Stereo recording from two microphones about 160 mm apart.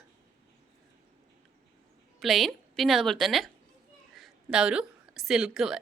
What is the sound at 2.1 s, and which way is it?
A woman's voice, centre (ahead or behind).